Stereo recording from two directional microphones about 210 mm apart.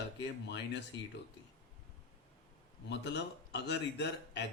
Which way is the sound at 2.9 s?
55° left (ahead or behind).